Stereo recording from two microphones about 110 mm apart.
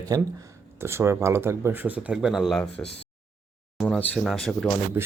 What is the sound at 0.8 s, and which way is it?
Speech, 25° right (ahead or behind).